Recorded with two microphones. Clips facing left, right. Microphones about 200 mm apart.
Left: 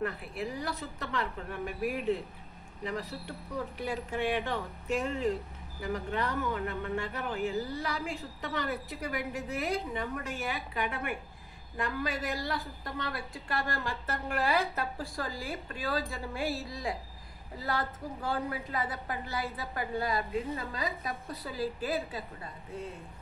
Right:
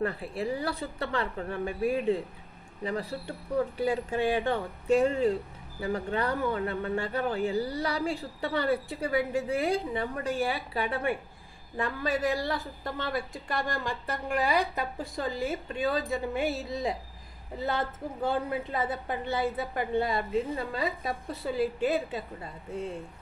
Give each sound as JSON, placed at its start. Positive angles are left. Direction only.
{"t": 0.0, "sound": "a woman's voice", "side_deg": -30}